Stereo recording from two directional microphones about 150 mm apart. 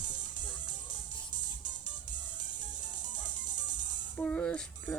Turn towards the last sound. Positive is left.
turn(degrees=10)  # may be behind; listen again after turning